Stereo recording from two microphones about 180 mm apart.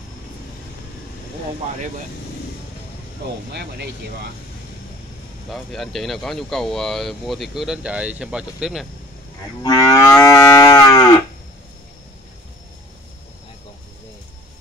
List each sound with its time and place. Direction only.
3.2 s speech: 70° right (ahead or behind)
5.5 s speech: centre (ahead or behind)
9.6 s moo: 20° left (ahead or behind)